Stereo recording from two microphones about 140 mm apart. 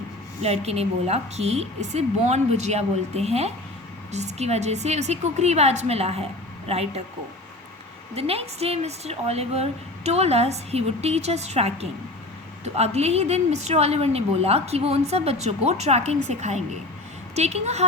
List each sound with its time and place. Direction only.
0.4 s a woman's voice: 50° right (ahead or behind)
8.1 s a woman's voice: 45° right (ahead or behind)